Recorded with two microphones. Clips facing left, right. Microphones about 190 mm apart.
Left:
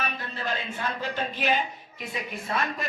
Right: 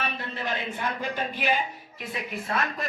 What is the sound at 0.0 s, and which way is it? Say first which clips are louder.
A man's voice: right 1 dB; 20° right (ahead or behind).